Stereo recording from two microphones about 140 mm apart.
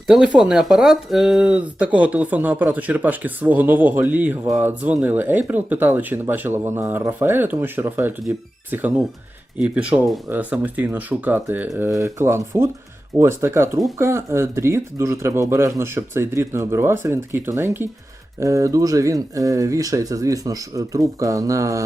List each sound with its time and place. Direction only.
0.1 s speech: 5° right (ahead or behind); by 21.8 s 25° right (ahead or behind)